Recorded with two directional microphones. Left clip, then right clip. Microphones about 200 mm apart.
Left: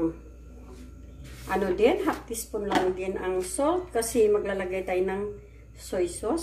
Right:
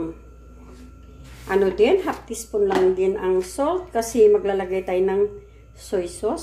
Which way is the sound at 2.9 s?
40° right (ahead or behind).